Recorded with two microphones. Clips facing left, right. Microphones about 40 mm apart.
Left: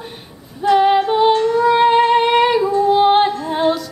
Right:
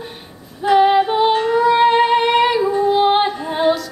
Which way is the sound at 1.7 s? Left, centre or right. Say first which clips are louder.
Left 1 dB; centre.